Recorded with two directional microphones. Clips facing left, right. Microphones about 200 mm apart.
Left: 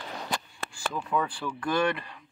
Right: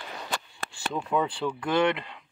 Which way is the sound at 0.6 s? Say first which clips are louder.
Right 2 dB; 25° right (ahead or behind).